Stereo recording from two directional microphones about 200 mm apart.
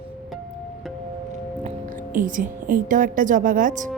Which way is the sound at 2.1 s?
40° right (ahead or behind).